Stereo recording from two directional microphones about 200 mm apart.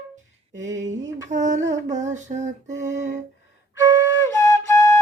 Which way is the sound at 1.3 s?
40° right (ahead or behind).